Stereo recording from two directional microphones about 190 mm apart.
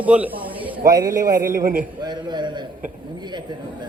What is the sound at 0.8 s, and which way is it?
Speech, 20° right (ahead or behind).